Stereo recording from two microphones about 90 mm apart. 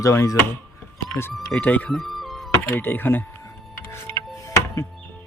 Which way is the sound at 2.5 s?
25° left (ahead or behind).